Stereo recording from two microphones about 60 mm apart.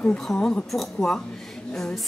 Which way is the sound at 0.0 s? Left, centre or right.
Centre.